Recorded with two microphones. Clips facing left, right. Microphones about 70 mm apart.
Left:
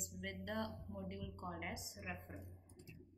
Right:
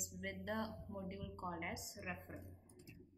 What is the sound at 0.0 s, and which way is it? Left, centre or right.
A woman's voice, centre.